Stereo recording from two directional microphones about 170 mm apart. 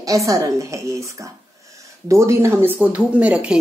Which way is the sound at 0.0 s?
20° right (ahead or behind).